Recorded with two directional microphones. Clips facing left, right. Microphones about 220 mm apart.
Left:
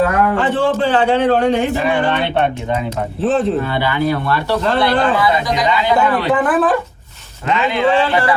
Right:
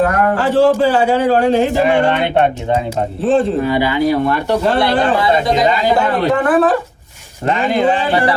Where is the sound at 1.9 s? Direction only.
25° right (ahead or behind).